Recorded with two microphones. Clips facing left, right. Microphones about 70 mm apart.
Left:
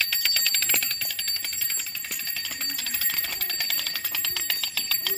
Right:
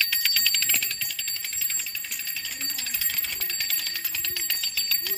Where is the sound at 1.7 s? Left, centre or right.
Left.